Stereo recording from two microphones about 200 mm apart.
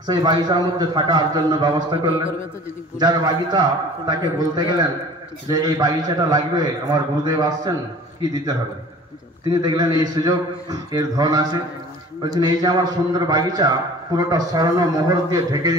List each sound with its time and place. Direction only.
0.0 s a man's voice: 20° right (ahead or behind)
3.0 s a man's voice: 20° right (ahead or behind)
9.5 s a man's voice: 20° right (ahead or behind)